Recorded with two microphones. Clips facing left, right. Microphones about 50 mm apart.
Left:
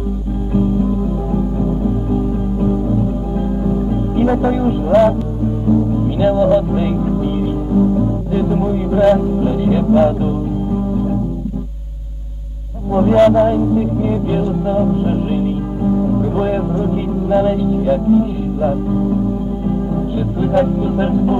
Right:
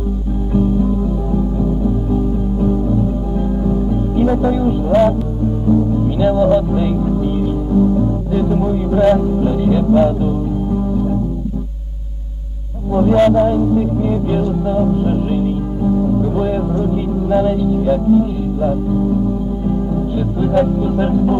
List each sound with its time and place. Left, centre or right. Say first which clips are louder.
3.3 s music: even; centre
4.2 s music: even; left
6.1 s music: left 1 dB; centre
12.9 s a man's voice: even; left
13.3 s music: left 1 dB; left
13.6 s music: even; centre
16.1 s music: even; left
20.2 s music: even; centre